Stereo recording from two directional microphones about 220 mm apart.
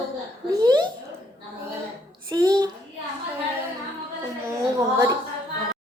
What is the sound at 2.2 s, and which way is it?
Speech, 15° right (ahead or behind).